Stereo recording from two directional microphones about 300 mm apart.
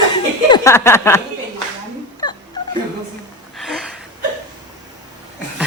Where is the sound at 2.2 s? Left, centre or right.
Centre.